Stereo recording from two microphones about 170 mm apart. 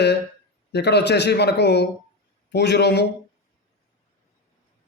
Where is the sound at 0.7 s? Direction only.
80° left.